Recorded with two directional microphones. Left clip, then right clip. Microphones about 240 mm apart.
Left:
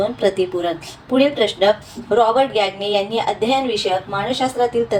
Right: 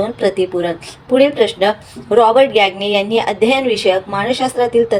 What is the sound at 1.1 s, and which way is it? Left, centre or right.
A woman's voice, centre.